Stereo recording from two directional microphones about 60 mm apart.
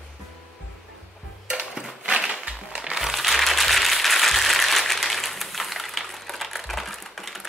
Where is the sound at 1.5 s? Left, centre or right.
Centre.